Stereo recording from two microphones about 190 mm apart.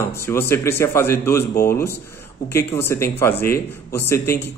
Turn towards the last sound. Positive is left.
turn(degrees=15)  # may be behind; listen again after turning